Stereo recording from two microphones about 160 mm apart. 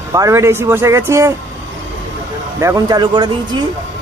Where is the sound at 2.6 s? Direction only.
20° right (ahead or behind).